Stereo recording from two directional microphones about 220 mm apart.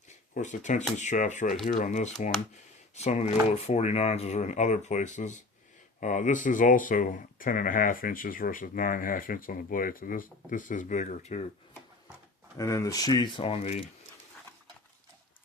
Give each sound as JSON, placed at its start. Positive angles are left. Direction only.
{"t": 0.1, "sound": "speech", "side_deg": 35}
{"t": 12.5, "sound": "speech", "side_deg": 15}